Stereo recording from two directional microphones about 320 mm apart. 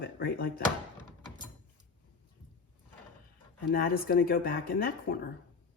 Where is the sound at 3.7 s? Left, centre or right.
Left.